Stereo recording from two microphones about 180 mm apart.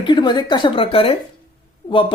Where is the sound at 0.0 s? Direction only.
25° left (ahead or behind).